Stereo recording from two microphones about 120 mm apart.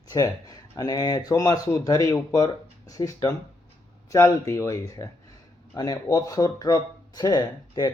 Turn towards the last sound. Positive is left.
turn(degrees=35)  # may be behind; listen again after turning